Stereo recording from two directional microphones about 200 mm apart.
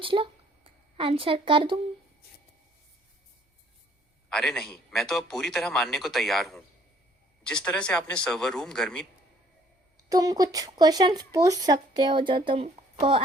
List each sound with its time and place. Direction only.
0.0 s speech: 25° right (ahead or behind)
4.3 s a man's voice: centre (ahead or behind)
10.0 s speech: 20° right (ahead or behind)